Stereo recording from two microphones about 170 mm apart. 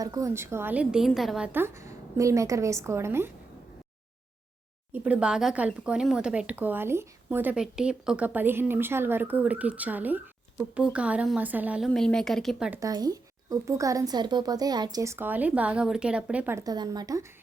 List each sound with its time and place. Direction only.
0.0 s speech: 20° right (ahead or behind); by 1.5 s centre (ahead or behind)
1.5 s speech: 15° right (ahead or behind)
4.9 s speech: 10° right (ahead or behind)
11.9 s speech: 5° left (ahead or behind)
12.8 s speech: 20° right (ahead or behind)